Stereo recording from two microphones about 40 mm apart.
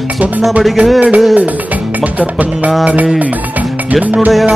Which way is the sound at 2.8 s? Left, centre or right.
Right.